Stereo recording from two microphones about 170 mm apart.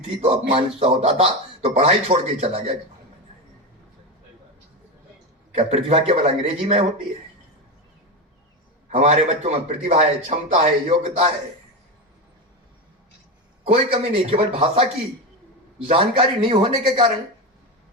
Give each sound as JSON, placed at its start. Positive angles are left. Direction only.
{"t": 0.2, "sound": "speech", "side_deg": -35}
{"t": 5.5, "sound": "speech", "side_deg": -40}
{"t": 8.9, "sound": "speech", "side_deg": -45}
{"t": 13.9, "sound": "speech", "side_deg": -30}
{"t": 15.9, "sound": "speech", "side_deg": -30}